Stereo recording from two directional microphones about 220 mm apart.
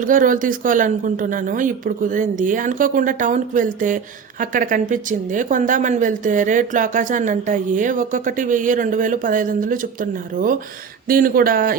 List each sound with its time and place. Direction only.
0.0 s speech: 35° right (ahead or behind)